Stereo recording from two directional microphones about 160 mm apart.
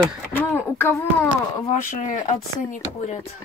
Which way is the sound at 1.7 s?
50° left (ahead or behind).